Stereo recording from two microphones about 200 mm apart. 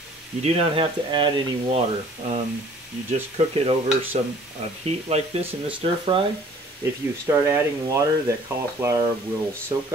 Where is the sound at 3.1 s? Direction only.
30° right (ahead or behind).